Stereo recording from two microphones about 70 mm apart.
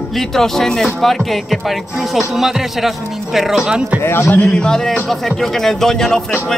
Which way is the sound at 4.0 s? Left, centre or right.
Left.